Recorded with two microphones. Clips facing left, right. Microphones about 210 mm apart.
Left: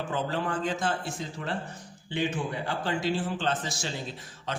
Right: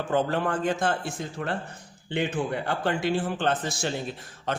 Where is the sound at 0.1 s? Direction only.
55° right (ahead or behind).